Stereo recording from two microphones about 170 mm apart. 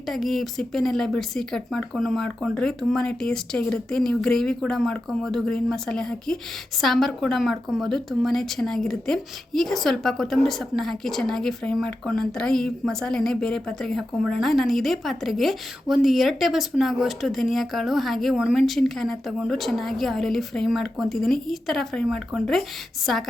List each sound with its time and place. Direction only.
0.1 s speech: centre (ahead or behind)